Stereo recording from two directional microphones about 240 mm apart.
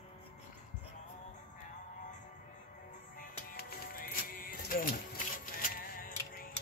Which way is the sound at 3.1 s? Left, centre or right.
Left.